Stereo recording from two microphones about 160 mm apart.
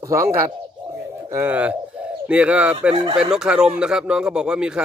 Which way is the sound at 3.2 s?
5° right (ahead or behind).